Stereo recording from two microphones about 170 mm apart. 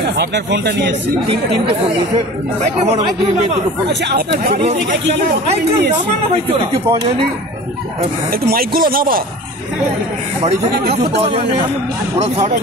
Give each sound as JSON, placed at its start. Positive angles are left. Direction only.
{"t": 0.0, "sound": "speech", "side_deg": -80}
{"t": 6.3, "sound": "speech", "side_deg": -30}
{"t": 8.3, "sound": "speech", "side_deg": -60}